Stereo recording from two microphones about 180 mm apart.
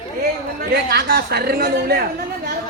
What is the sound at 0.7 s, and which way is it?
A woman's voice, 65° right (ahead or behind).